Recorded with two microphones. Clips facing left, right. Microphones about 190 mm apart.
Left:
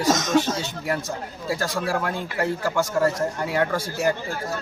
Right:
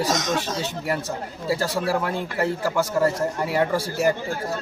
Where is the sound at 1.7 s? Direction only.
5° right (ahead or behind).